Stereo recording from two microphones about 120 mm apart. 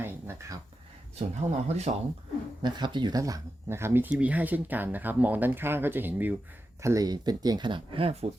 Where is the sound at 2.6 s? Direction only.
40° right (ahead or behind); by 6.4 s 15° right (ahead or behind).